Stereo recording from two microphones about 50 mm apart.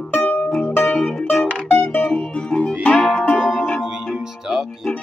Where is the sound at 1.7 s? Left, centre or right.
Left.